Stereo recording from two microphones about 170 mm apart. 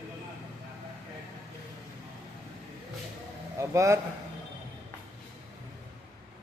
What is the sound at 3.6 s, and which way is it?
Speech, 15° right (ahead or behind).